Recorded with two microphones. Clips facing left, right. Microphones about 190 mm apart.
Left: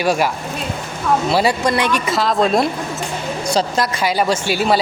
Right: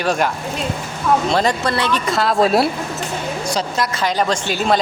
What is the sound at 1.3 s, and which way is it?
Speech, 10° left (ahead or behind).